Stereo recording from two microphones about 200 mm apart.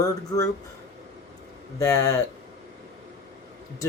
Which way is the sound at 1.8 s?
15° left (ahead or behind).